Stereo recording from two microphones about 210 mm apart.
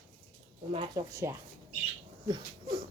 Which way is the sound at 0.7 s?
15° right (ahead or behind).